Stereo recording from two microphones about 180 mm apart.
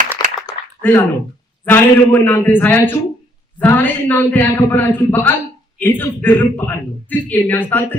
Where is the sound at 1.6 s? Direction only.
10° left (ahead or behind).